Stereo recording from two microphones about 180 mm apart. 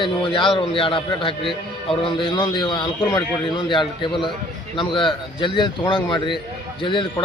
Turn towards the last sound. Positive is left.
turn(degrees=25)  # may be behind; listen again after turning